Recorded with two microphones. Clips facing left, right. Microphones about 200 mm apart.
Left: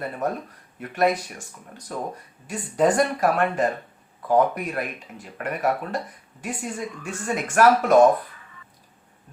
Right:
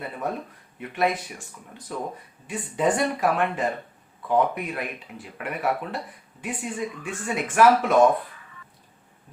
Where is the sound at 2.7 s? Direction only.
40° left (ahead or behind).